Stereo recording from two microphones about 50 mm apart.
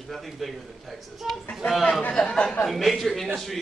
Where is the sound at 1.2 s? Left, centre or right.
Centre.